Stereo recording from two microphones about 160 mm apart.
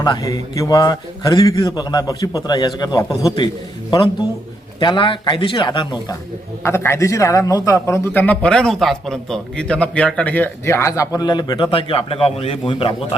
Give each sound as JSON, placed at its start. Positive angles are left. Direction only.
{"t": 0.0, "sound": "a man's voice", "side_deg": 25}
{"t": 4.8, "sound": "a man's voice", "side_deg": 30}
{"t": 6.6, "sound": "a man's voice", "side_deg": 15}